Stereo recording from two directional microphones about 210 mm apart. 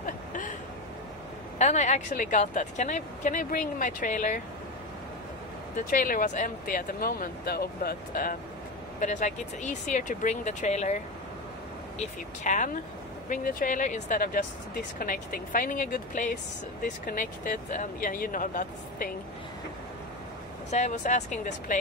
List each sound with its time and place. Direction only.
0.0 s a sound: 40° left (ahead or behind)
1.6 s a woman's voice: 35° left (ahead or behind)
5.8 s a woman's voice: 40° left (ahead or behind)
12.0 s a woman's voice: 35° left (ahead or behind)
20.7 s a woman's voice: 35° left (ahead or behind)